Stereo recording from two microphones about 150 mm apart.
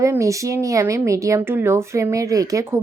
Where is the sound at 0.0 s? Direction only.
20° right (ahead or behind).